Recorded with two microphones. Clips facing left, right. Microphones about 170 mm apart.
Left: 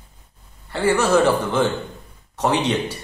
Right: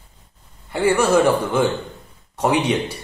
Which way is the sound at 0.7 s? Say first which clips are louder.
Right 1 dB; 10° right (ahead or behind).